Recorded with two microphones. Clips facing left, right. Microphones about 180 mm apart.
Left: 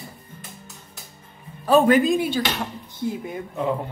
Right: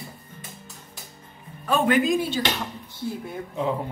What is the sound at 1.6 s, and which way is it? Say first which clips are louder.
Speech: left 6 dB; 35° left (ahead or behind).